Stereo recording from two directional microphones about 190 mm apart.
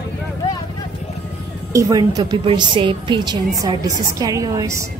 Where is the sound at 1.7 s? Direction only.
20° right (ahead or behind).